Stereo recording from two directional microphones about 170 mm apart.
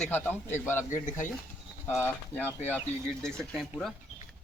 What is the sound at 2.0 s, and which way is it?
A man's voice, 10° left (ahead or behind).